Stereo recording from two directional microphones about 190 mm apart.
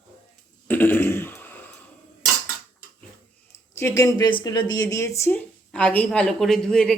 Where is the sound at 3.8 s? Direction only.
15° left (ahead or behind).